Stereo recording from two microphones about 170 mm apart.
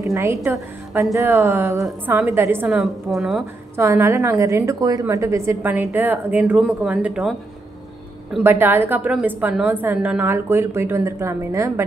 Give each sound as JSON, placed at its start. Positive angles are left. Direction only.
{"t": 0.0, "sound": "a woman's voice", "side_deg": -20}
{"t": 2.8, "sound": "a woman's voice", "side_deg": 0}
{"t": 3.7, "sound": "a woman's voice", "side_deg": -15}